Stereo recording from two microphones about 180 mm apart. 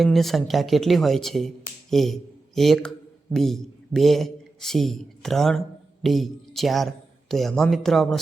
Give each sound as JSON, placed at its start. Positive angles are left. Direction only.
{"t": 0.0, "sound": "a man's voice", "side_deg": 0}